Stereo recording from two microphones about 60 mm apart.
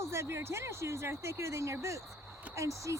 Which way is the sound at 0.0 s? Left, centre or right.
Right.